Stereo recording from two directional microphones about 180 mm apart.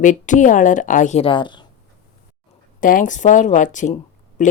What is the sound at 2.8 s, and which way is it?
Speech, 45° left (ahead or behind).